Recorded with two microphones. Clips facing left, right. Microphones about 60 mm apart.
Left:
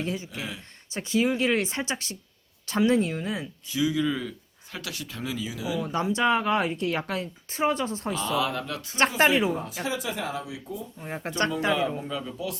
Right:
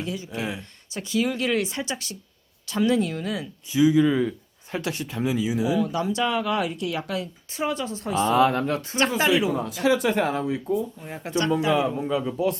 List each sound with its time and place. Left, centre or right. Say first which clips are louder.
0.0 s speech: even; left
0.3 s speech: right 6 dB; right
0.9 s speech: even; left
3.7 s speech: right 7 dB; right
5.1 s speech: right 9 dB; right
5.8 s a woman's voice: even; left
8.1 s speech: right 10 dB; right
9.0 s a woman's voice: left 1 dB; left
9.8 s speech: right 12 dB; right
11.0 s a woman's voice: right 2 dB; left
12.0 s speech: right 8 dB; centre